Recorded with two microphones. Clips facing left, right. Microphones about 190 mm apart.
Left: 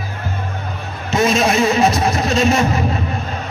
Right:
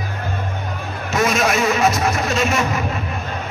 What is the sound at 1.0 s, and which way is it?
Speech, 25° left (ahead or behind).